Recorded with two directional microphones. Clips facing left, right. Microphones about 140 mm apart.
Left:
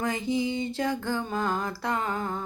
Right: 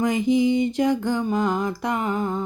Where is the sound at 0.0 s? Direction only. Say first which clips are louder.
Right 8 dB; 15° right (ahead or behind).